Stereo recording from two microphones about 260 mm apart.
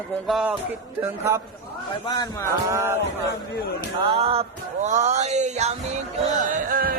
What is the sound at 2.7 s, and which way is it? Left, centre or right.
Music, centre.